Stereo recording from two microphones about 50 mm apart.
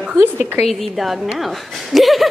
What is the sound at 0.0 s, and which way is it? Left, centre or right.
Speech, right.